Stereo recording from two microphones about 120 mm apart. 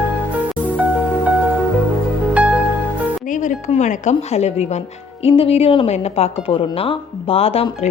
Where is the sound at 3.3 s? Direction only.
90° left; by 4.6 s 65° left (ahead or behind).